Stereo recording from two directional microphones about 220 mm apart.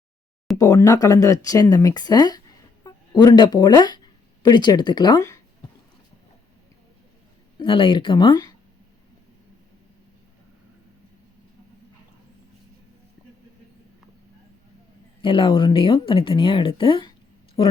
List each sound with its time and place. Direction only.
0.6 s speech: 15° left (ahead or behind)
7.6 s speech: 25° left (ahead or behind)
15.2 s speech: 25° left (ahead or behind)